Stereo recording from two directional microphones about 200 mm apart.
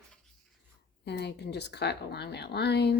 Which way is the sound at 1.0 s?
55° left (ahead or behind).